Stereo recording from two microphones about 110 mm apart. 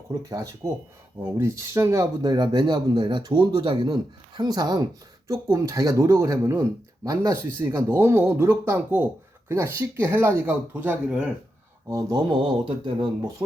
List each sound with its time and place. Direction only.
0.3 s speech: 35° right (ahead or behind); by 11.3 s 10° right (ahead or behind)
11.9 s speech: 30° right (ahead or behind)
12.3 s speech: 50° right (ahead or behind)